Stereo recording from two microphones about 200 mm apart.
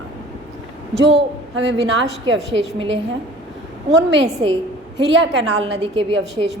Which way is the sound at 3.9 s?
65° right (ahead or behind).